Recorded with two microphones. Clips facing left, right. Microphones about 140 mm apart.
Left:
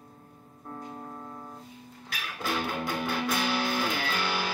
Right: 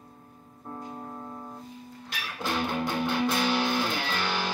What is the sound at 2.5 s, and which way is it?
Music, 25° right (ahead or behind).